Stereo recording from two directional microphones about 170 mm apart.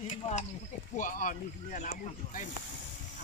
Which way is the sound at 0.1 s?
40° left (ahead or behind).